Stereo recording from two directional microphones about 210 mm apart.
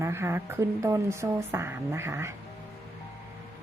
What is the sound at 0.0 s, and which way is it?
Speech, 10° right (ahead or behind).